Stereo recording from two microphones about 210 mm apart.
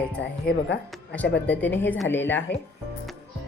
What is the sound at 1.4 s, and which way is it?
A woman's voice, 10° left (ahead or behind).